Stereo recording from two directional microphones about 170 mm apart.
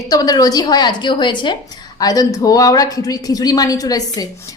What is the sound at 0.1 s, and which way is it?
A woman's voice, 20° left (ahead or behind).